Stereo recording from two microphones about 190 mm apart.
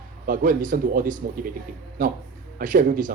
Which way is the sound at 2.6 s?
45° right (ahead or behind).